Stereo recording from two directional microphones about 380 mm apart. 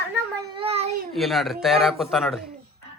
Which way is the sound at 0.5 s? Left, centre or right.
Centre.